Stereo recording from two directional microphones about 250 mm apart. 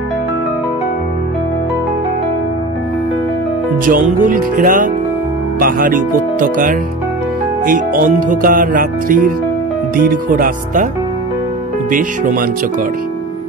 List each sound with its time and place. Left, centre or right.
3.8 s music: right
11.9 s music: right